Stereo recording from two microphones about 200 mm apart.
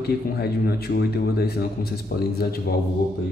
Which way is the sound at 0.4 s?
50° left (ahead or behind).